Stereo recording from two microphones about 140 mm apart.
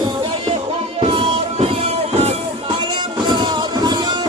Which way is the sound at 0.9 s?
40° right (ahead or behind).